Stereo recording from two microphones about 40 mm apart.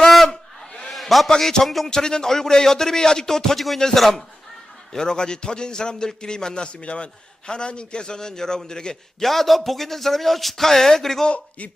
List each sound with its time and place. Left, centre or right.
0.0 s a sound: centre
1.4 s speech: centre
1.9 s speech: centre
4.9 s a man's voice: centre
9.2 s a man's voice: centre
11.3 s speech: left